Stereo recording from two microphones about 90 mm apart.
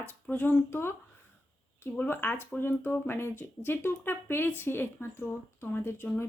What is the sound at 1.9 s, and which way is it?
Speech, 20° left (ahead or behind).